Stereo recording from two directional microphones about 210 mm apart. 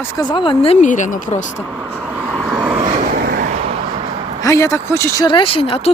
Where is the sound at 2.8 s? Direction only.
35° right (ahead or behind).